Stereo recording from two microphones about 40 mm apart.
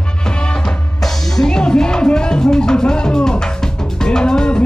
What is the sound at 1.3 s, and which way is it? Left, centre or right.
Music, centre.